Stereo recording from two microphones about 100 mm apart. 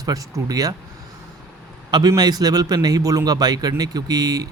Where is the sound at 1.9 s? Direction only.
40° right (ahead or behind).